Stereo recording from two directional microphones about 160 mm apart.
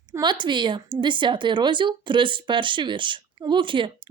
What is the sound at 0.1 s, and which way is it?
A woman's voice, 25° right (ahead or behind).